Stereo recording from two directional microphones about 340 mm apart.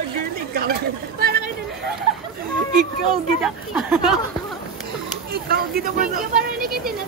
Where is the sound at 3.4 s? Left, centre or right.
Centre.